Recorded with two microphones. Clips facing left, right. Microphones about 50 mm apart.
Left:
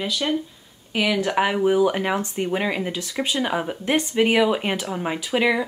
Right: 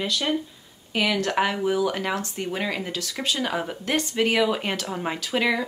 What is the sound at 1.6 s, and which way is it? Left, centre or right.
Speech, left.